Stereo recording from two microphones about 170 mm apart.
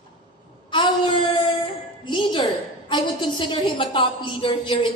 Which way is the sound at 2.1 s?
30° left (ahead or behind).